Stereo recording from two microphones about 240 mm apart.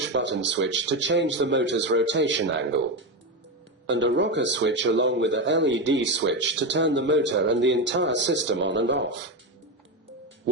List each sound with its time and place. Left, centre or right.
0.1 s speech: right